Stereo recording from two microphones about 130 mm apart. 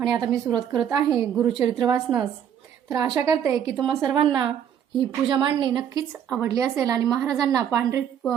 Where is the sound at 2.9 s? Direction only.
30° right (ahead or behind).